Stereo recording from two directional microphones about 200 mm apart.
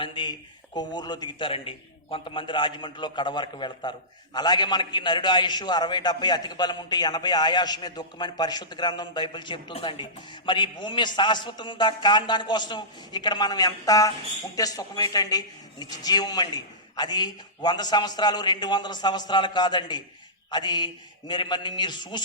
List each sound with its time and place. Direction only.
0.0 s a man's voice: 25° left (ahead or behind)